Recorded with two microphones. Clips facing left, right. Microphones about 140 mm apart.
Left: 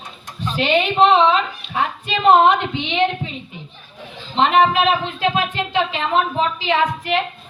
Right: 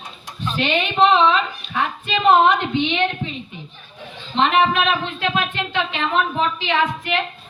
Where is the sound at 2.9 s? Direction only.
30° left (ahead or behind).